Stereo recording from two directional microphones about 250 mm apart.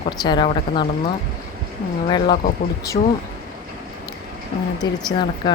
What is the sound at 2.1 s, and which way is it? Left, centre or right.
Speech, centre.